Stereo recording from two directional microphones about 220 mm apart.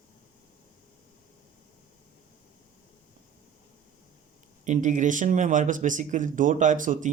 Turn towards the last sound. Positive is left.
turn(degrees=-35)  # may be behind; listen again after turning